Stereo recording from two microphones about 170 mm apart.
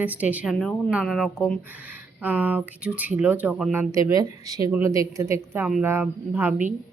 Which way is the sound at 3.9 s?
20° right (ahead or behind).